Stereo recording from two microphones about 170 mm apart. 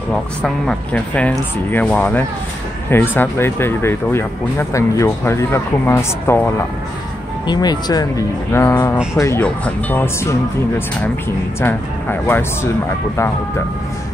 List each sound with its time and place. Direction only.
0.1 s speech: 5° left (ahead or behind)
7.4 s speech: 25° left (ahead or behind)
11.6 s speech: 10° left (ahead or behind)